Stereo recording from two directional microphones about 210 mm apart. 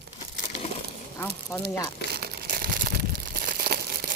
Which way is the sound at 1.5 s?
15° left (ahead or behind).